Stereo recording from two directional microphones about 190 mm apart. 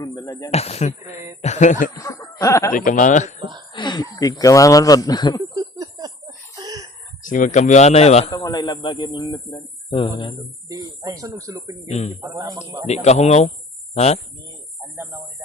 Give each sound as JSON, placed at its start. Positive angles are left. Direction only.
{"t": 0.0, "sound": "speech", "side_deg": 20}
{"t": 0.5, "sound": "speech", "side_deg": 35}
{"t": 2.0, "sound": "snicker", "side_deg": 15}
{"t": 2.4, "sound": "speech", "side_deg": 15}
{"t": 2.7, "sound": "speech", "side_deg": 45}
{"t": 3.7, "sound": "speech", "side_deg": 25}
{"t": 5.5, "sound": "a sound", "side_deg": -20}
{"t": 7.2, "sound": "speech", "side_deg": 45}
{"t": 8.3, "sound": "speech", "side_deg": 20}
{"t": 10.7, "sound": "speech", "side_deg": -20}
{"t": 11.9, "sound": "speech", "side_deg": 35}
{"t": 12.2, "sound": "a man's voice", "side_deg": -20}
{"t": 12.9, "sound": "speech", "side_deg": 35}